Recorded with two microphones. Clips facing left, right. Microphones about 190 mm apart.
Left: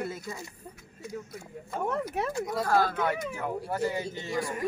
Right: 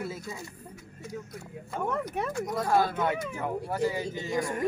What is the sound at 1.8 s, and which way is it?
Speech, 5° left (ahead or behind).